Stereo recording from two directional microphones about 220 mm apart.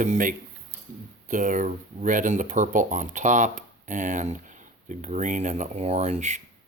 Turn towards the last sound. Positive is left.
turn(degrees=-30)  # may be behind; listen again after turning